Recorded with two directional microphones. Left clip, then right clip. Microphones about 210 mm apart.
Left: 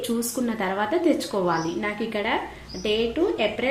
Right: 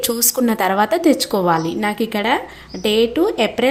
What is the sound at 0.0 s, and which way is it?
A woman's voice, 55° right (ahead or behind).